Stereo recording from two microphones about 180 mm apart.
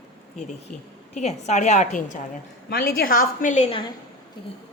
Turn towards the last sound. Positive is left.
turn(degrees=35)  # may be behind; listen again after turning